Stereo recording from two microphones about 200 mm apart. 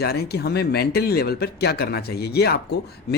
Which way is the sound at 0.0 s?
50° left (ahead or behind).